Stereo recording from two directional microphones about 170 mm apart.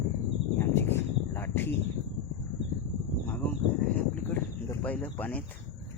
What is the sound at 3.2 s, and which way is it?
Speech, 10° left (ahead or behind).